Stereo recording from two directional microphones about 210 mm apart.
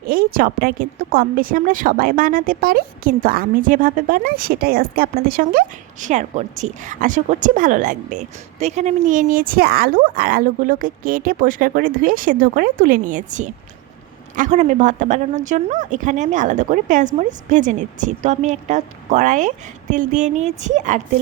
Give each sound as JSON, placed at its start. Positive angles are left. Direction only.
{"t": 0.0, "sound": "a woman's voice", "side_deg": -45}